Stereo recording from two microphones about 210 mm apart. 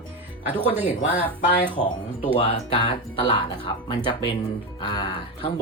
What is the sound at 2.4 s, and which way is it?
Speech, 25° left (ahead or behind).